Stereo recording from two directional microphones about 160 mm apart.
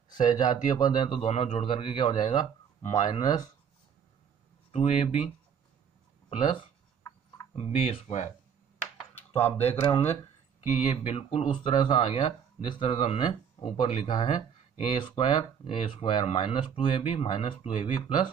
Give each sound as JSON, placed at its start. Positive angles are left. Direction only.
{"t": 0.1, "sound": "speech", "side_deg": 30}
{"t": 4.7, "sound": "speech", "side_deg": 40}
{"t": 6.3, "sound": "speech", "side_deg": 30}
{"t": 9.1, "sound": "a sound", "side_deg": 15}
{"t": 9.7, "sound": "speech", "side_deg": 35}